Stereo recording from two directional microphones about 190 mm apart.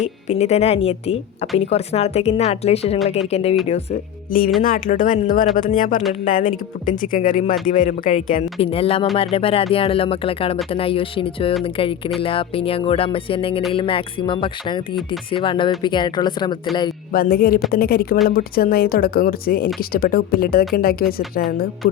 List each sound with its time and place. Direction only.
0.0 s a woman's voice: 35° left (ahead or behind)
4.6 s speech: 45° left (ahead or behind)
7.0 s a woman's voice: 45° left (ahead or behind)
9.1 s music: 30° left (ahead or behind)
17.1 s speech: 50° left (ahead or behind)